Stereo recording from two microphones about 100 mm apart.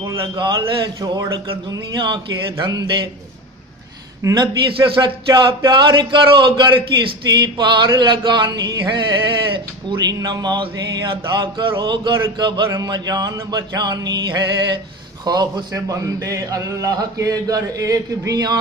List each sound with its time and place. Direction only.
0.4 s a man's voice: 45° right (ahead or behind)
4.2 s a man's voice: 35° right (ahead or behind)
4.6 s a man's voice: 55° right (ahead or behind); by 18.6 s 40° right (ahead or behind)